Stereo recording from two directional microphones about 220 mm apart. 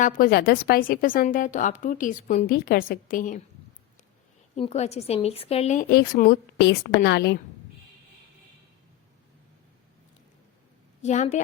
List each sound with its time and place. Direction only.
0.0 s a woman's voice: 45° left (ahead or behind)
2.5 s a woman's voice: 45° left (ahead or behind)
4.5 s a woman's voice: 30° left (ahead or behind)
5.9 s a woman's voice: 45° left (ahead or behind)
11.0 s a woman's voice: 35° left (ahead or behind)